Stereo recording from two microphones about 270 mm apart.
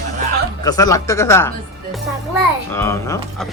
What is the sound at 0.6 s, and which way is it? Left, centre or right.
Speech, centre.